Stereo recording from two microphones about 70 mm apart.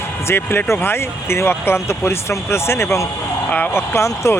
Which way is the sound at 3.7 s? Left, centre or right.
Left.